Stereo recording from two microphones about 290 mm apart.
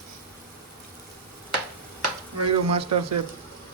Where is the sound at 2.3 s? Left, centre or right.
Right.